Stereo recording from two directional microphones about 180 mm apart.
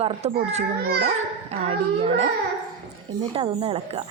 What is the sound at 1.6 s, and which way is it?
Speech, 35° right (ahead or behind).